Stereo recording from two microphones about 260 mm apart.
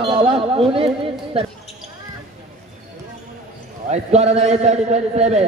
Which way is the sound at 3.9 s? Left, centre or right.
Right.